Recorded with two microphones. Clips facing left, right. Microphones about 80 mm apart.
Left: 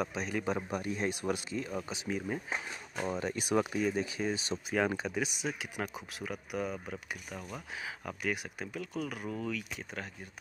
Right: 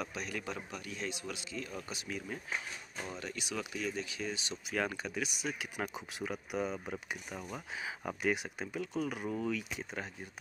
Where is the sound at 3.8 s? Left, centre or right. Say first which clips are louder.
Left 6 dB; centre.